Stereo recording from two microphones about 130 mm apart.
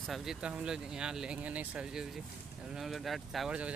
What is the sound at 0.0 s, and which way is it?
Speech, centre (ahead or behind).